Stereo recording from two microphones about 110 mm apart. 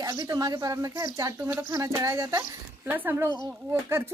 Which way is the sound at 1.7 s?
30° right (ahead or behind).